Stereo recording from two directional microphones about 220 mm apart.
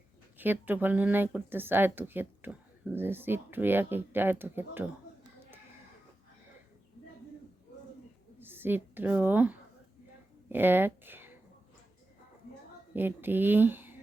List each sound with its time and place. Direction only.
0.3 s speech: 10° right (ahead or behind)
8.4 s a woman's voice: 10° right (ahead or behind)
12.9 s speech: 10° right (ahead or behind)